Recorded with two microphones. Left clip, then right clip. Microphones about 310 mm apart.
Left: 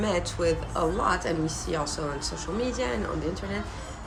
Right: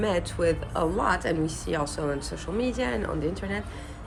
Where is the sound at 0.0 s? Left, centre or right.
Right.